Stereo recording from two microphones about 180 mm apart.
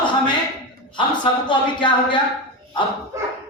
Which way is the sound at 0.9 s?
25° left (ahead or behind).